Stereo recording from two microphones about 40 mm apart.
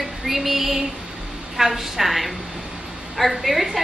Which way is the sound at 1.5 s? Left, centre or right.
Centre.